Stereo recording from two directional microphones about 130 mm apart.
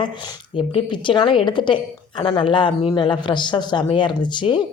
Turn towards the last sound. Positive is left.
turn(degrees=35)  # may be behind; listen again after turning